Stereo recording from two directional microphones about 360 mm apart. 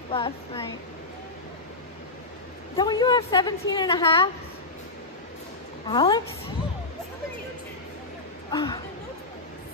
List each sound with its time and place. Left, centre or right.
0.1 s a woman's voice: centre
2.8 s a woman's voice: centre
5.9 s a woman's voice: centre
8.5 s a woman's voice: centre